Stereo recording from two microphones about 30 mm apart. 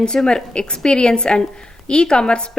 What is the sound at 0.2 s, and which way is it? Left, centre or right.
Speech, centre.